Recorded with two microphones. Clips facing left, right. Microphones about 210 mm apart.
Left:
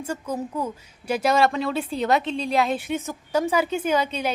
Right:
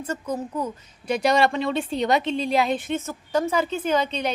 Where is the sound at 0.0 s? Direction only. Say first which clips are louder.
Even; 10° left (ahead or behind).